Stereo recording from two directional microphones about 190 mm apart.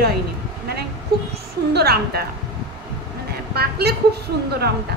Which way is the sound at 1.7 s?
55° right (ahead or behind).